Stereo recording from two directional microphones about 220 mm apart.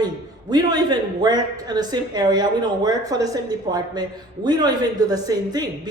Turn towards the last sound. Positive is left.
turn(degrees=-15)  # may be behind; listen again after turning